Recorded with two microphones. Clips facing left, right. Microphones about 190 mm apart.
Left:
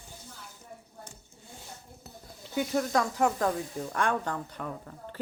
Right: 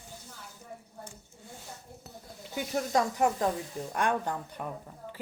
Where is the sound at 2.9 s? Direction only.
20° right (ahead or behind).